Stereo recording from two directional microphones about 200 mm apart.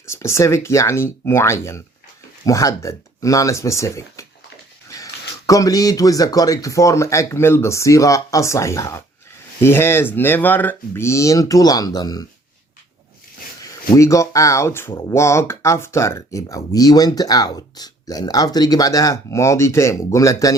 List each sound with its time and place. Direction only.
0.0 s speech: 15° left (ahead or behind)
5.5 s speech: 15° left (ahead or behind)
13.9 s speech: 15° left (ahead or behind)